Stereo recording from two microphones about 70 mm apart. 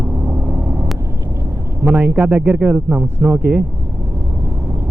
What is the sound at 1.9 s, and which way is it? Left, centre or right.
A man's voice, centre.